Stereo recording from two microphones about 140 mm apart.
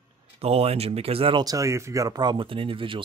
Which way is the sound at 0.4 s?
45° right (ahead or behind).